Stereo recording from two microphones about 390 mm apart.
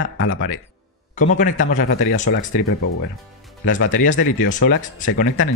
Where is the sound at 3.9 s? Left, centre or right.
Left.